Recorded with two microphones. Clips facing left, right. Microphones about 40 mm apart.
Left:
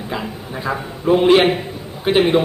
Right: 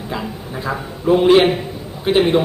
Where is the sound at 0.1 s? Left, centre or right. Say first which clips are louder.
Even; centre.